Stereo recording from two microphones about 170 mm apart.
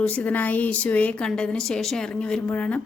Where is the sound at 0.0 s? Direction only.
10° left (ahead or behind).